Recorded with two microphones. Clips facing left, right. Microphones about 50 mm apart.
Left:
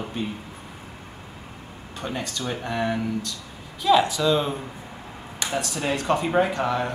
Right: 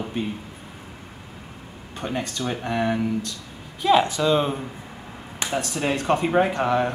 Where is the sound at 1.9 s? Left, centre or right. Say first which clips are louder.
Right 2 dB; centre.